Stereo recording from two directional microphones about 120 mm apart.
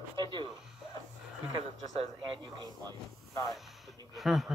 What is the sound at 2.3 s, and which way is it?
Speech, 35° right (ahead or behind).